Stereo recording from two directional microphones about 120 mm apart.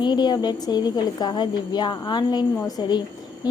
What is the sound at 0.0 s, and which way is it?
A woman's voice, 35° left (ahead or behind).